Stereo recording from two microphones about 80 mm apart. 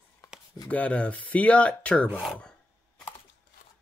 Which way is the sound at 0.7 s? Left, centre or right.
Centre.